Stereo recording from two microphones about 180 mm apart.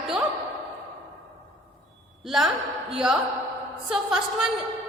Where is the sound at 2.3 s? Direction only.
Centre (ahead or behind).